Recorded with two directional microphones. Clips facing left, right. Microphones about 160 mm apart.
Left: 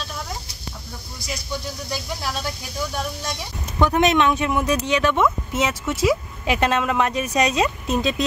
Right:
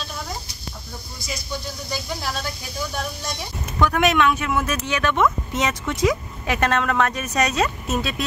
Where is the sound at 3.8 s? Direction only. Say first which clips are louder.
Left 1 dB; 20° left (ahead or behind).